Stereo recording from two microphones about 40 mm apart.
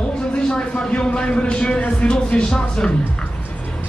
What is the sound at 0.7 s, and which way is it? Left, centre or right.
Speech, left.